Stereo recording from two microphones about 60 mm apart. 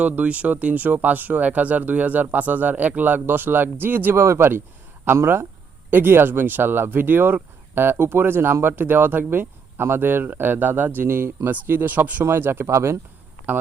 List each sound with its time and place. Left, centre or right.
0.0 s speech: right
4.1 s speech: right
11.0 s speech: right
12.2 s speech: right
13.5 s speech: right